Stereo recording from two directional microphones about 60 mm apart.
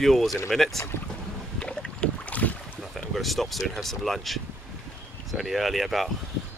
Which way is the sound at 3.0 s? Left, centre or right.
Centre.